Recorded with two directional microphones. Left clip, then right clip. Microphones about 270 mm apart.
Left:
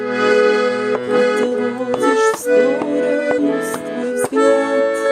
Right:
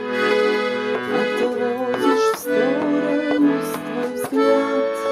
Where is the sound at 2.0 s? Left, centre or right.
Left.